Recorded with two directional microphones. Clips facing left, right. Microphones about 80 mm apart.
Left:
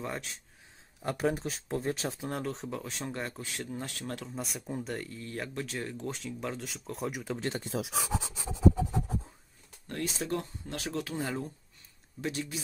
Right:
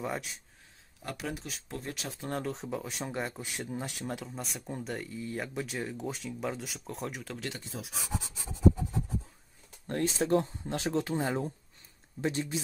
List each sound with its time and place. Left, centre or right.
0.0 s speech: centre
1.1 s speech: left
2.2 s speech: centre
4.2 s speech: centre
7.3 s speech: left
7.6 s speech: left
8.7 s writing: left
9.8 s speech: right